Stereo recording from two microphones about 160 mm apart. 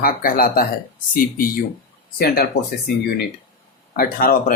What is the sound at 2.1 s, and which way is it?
Speech, 75° left (ahead or behind).